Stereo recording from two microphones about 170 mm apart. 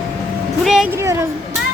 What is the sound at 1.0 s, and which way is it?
Speech, 15° right (ahead or behind).